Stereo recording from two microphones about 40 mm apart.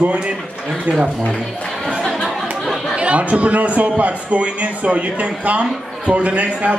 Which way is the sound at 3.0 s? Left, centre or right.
Right.